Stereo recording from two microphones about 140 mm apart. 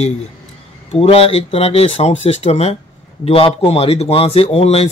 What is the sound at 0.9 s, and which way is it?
Speech, 45° left (ahead or behind).